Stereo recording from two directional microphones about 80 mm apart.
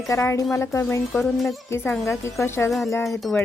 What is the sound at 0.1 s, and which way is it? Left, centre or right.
Speech, left.